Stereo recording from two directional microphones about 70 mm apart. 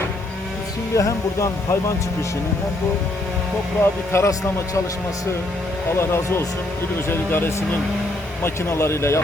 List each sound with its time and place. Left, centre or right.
0.9 s speech: left
3.8 s speech: left
6.0 s speech: left